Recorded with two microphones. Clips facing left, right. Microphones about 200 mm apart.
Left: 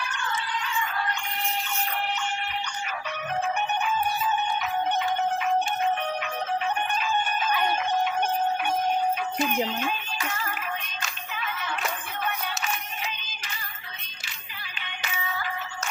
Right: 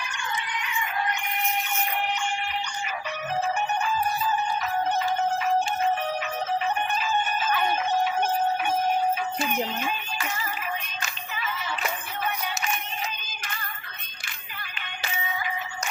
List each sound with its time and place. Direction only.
0.1 s music: 15° right (ahead or behind)
3.8 s music: centre (ahead or behind)
7.0 s crowing: 5° right (ahead or behind)
9.4 s speech: 10° right (ahead or behind)
11.0 s music: 5° right (ahead or behind)
15.3 s music: 15° right (ahead or behind)